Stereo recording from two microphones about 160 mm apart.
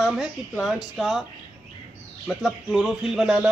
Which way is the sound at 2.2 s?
Centre (ahead or behind).